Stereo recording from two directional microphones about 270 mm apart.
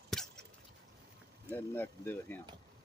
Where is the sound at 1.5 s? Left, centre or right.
Centre.